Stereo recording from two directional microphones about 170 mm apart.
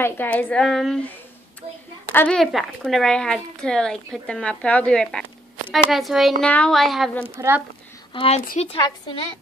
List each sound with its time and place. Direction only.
0.0 s a woman's voice: 10° left (ahead or behind)
2.1 s a woman's voice: 5° left (ahead or behind)
7.2 s speech: 15° right (ahead or behind)
8.1 s a woman's voice: 30° left (ahead or behind)